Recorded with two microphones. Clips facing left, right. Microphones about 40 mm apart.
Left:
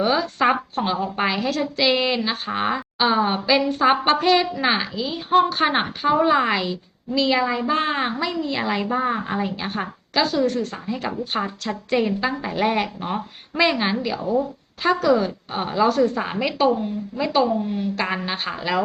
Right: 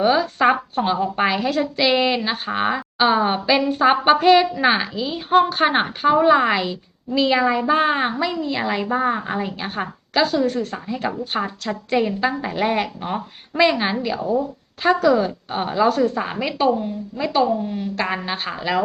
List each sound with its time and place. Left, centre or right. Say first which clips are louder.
0.0 s a woman's voice: right 3 dB; centre
14.2 s speech: right 1 dB; right
14.8 s a woman's voice: right 2 dB; centre
17.6 s a woman's voice: left 1 dB; centre
17.9 s a woman's voice: right 1 dB; centre